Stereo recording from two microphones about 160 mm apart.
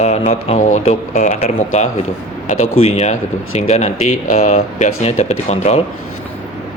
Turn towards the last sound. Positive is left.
turn(degrees=40)  # may be behind; listen again after turning